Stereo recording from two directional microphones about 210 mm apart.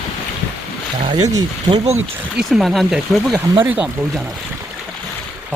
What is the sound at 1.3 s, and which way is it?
Speech, 20° right (ahead or behind).